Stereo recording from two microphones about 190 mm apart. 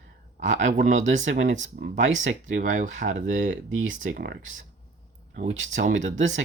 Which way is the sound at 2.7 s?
40° right (ahead or behind).